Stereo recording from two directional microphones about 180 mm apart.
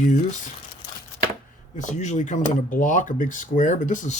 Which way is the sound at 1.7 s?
40° left (ahead or behind).